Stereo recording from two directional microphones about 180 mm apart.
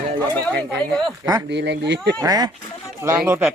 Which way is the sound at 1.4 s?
75° right (ahead or behind).